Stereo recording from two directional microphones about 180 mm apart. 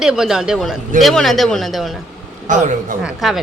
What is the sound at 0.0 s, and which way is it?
Speech, 5° right (ahead or behind).